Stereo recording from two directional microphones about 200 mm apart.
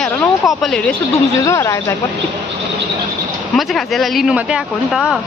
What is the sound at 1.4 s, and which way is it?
Speech, 15° left (ahead or behind).